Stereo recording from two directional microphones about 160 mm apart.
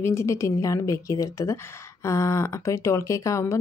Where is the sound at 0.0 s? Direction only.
15° left (ahead or behind).